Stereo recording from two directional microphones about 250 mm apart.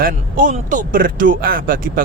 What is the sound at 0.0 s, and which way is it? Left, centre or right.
Speech, right.